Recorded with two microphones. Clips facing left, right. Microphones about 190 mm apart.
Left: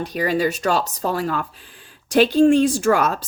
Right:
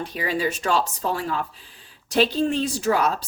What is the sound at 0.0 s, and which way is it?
Speech, 40° left (ahead or behind).